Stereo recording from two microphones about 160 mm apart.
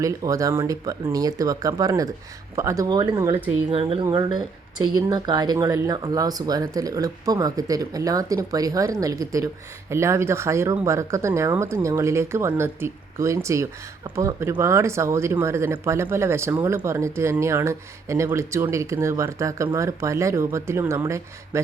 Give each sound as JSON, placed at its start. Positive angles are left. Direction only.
{"t": 0.0, "sound": "speech", "side_deg": -20}
{"t": 3.7, "sound": "speech", "side_deg": -35}
{"t": 4.0, "sound": "speech", "side_deg": -25}